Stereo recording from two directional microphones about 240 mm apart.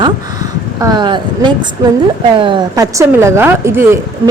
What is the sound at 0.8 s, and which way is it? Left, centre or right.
A woman's voice, centre.